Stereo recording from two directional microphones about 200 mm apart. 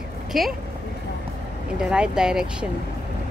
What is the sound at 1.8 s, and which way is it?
Speech, 5° right (ahead or behind).